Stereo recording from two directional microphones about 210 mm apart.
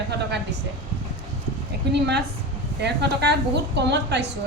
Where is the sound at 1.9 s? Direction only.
55° right (ahead or behind).